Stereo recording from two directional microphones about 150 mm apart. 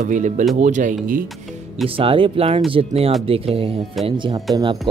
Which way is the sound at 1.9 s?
35° right (ahead or behind).